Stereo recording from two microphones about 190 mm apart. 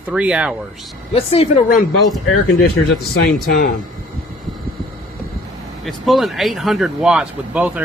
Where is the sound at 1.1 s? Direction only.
30° left (ahead or behind).